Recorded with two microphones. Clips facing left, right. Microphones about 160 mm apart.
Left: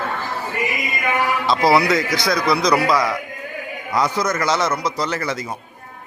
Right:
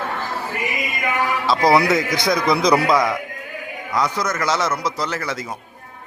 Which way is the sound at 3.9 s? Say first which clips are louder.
Left 2 dB; centre (ahead or behind).